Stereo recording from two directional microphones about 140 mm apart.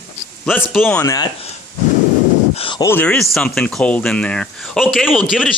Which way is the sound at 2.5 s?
40° left (ahead or behind).